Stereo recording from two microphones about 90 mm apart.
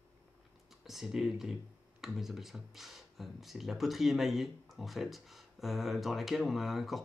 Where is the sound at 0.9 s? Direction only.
5° right (ahead or behind).